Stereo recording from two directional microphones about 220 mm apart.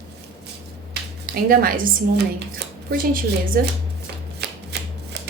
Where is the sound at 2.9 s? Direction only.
40° right (ahead or behind).